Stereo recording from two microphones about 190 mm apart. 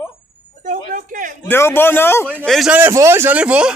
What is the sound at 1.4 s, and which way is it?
Speech, 10° left (ahead or behind).